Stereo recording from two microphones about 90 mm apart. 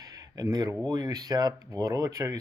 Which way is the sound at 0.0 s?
45° right (ahead or behind).